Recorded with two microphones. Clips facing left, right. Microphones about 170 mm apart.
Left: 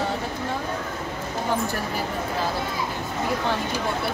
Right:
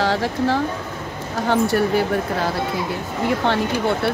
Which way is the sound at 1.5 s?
80° right.